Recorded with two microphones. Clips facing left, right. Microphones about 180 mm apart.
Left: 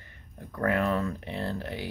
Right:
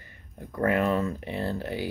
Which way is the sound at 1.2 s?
5° right (ahead or behind).